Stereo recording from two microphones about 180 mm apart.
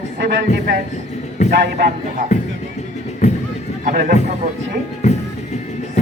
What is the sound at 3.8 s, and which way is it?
Speech, 50° right (ahead or behind).